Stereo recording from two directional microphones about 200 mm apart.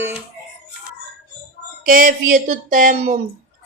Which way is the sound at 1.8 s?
45° right (ahead or behind).